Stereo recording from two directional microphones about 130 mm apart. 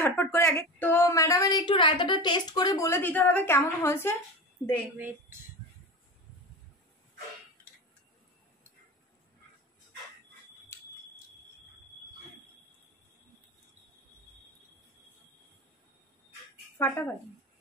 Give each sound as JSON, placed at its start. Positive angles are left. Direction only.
{"t": 0.0, "sound": "a woman's voice", "side_deg": 20}
{"t": 3.0, "sound": "a woman's voice", "side_deg": 15}
{"t": 4.9, "sound": "speech", "side_deg": -15}
{"t": 10.7, "sound": "smoke detector", "side_deg": 20}
{"t": 16.7, "sound": "speech", "side_deg": 15}